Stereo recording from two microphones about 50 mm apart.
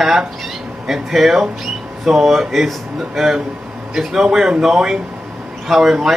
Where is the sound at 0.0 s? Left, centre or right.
Centre.